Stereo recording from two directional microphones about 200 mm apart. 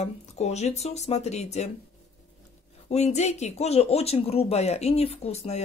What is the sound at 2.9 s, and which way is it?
Speech, 35° left (ahead or behind).